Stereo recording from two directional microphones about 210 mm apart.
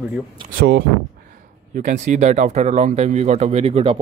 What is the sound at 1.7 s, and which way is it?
Speech, 35° right (ahead or behind).